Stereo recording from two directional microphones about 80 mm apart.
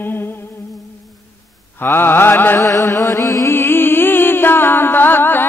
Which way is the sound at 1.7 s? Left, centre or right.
Left.